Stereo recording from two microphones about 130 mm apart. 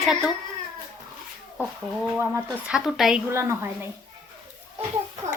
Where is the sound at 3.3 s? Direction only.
20° right (ahead or behind).